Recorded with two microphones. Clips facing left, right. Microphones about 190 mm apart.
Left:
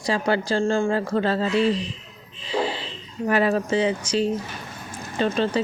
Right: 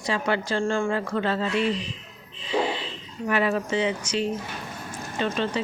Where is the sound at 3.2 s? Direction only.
35° left (ahead or behind).